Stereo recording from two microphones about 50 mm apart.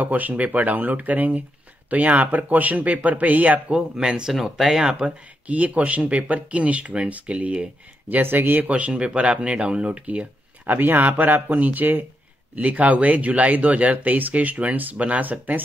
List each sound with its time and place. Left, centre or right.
0.0 s speech: right; by 4.2 s centre
4.3 s speech: centre
5.0 s speech: right
8.1 s speech: right
10.7 s speech: right